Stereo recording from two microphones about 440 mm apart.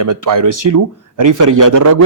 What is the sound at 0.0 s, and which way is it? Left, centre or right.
Speech, right.